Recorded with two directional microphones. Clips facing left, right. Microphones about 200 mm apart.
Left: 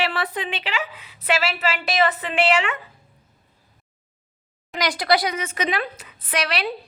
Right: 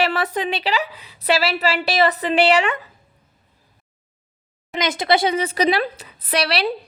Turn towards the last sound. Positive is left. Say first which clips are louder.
# right 4 dB
turn(degrees=-35)  # may be behind; listen again after turning